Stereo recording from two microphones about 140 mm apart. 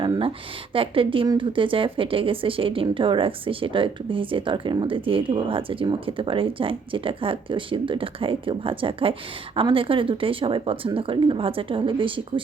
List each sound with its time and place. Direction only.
0.0 s speech: 35° right (ahead or behind)